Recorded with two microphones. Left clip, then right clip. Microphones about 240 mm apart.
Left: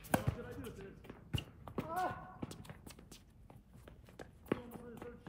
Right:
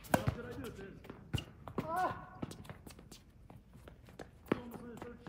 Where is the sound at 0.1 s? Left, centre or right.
Centre.